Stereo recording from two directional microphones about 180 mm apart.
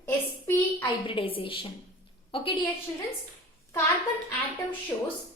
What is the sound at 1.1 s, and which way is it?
A woman's voice, 30° left (ahead or behind).